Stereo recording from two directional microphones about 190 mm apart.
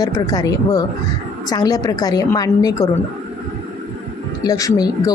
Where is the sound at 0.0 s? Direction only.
20° left (ahead or behind).